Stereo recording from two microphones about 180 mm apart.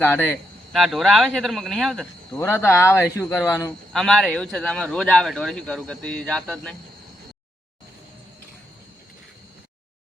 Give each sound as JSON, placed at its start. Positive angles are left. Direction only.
{"t": 0.0, "sound": "speech", "side_deg": 10}
{"t": 0.7, "sound": "a man's voice", "side_deg": 0}
{"t": 2.4, "sound": "speech", "side_deg": 15}
{"t": 3.9, "sound": "a man's voice", "side_deg": 0}